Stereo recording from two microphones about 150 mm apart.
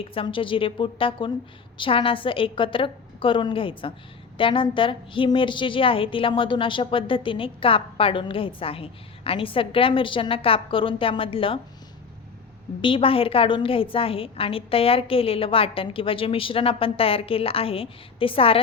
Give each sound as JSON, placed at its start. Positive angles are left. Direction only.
{"t": 0.0, "sound": "a woman's voice", "side_deg": 40}
{"t": 12.8, "sound": "a woman's voice", "side_deg": 35}